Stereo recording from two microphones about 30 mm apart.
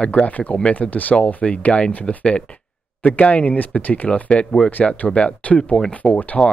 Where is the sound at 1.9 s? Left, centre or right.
Left.